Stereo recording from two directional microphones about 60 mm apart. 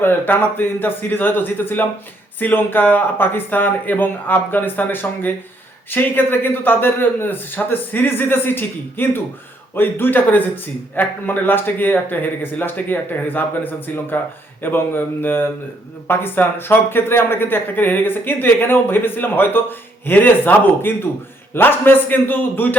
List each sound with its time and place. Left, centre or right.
0.0 s speech: left